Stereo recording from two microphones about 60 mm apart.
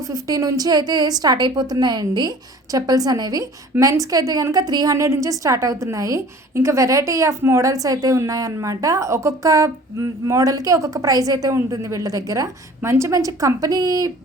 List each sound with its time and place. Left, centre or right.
0.1 s a woman's voice: right
2.7 s a woman's voice: right
5.0 s a woman's voice: right
7.7 s a woman's voice: right
11.7 s a woman's voice: right
12.9 s a woman's voice: right
13.1 s a woman's voice: right